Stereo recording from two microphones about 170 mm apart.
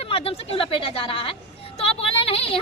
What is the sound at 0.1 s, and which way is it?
A woman's voice, 35° left (ahead or behind).